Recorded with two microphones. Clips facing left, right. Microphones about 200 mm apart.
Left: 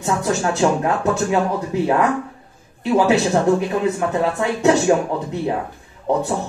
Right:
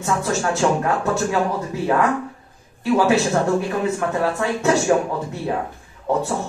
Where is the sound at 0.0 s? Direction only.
20° left (ahead or behind).